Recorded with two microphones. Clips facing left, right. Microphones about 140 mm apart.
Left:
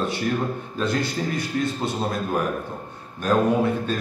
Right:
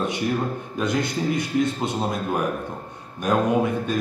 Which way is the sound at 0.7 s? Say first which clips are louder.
Right 1 dB; 20° right (ahead or behind).